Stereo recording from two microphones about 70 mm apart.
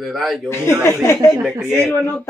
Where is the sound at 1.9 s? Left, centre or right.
Left.